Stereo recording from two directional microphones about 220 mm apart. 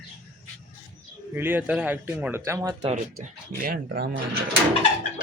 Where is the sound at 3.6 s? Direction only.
45° right (ahead or behind).